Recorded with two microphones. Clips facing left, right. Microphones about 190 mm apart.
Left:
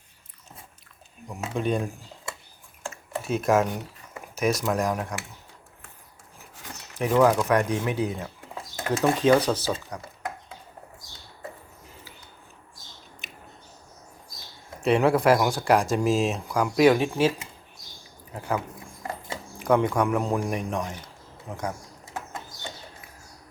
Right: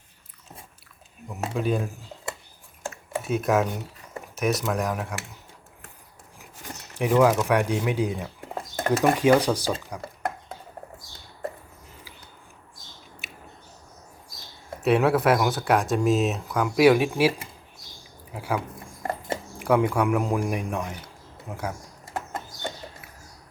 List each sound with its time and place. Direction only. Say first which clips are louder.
1.3 s speech: right 1 dB; 5° right (ahead or behind)
2.9 s computer keyboard: right 1 dB; centre (ahead or behind)
4.4 s speech: left 1 dB; centre (ahead or behind)
7.1 s speech: even; 5° right (ahead or behind)
8.5 s a sound: right 6 dB; 50° right (ahead or behind)
8.9 s speech: right 1 dB; 10° right (ahead or behind)
13.2 s a sound: right 1 dB; 10° right (ahead or behind)
14.8 s speech: even; 5° right (ahead or behind)
18.3 s speech: even; 10° right (ahead or behind)
19.0 s dog: right 5 dB; 55° right (ahead or behind)
19.6 s a man's voice: even; 10° right (ahead or behind)
22.0 s a sound: right 4 dB; 55° right (ahead or behind)